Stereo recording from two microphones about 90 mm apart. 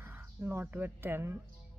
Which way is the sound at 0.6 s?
20° right (ahead or behind).